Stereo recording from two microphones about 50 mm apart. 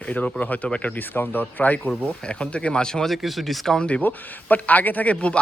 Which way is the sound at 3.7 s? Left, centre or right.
Left.